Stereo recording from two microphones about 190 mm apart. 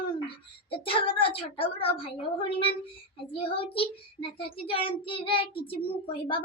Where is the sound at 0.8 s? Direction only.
30° left (ahead or behind).